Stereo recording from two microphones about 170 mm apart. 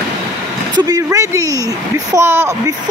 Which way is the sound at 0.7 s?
20° right (ahead or behind).